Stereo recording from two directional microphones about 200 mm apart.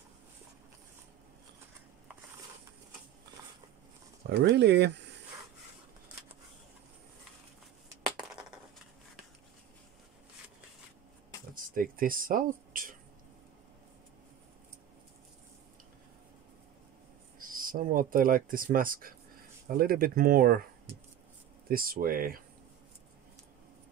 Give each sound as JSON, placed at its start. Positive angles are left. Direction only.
{"t": 4.3, "sound": "speech", "side_deg": -60}
{"t": 11.5, "sound": "a sound", "side_deg": -45}
{"t": 17.4, "sound": "speech", "side_deg": -45}
{"t": 21.6, "sound": "speech", "side_deg": -45}